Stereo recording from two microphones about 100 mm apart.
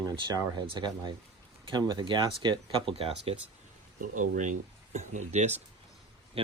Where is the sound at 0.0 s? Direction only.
45° right (ahead or behind).